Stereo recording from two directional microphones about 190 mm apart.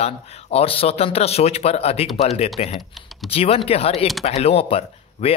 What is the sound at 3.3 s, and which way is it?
Speech, 30° left (ahead or behind).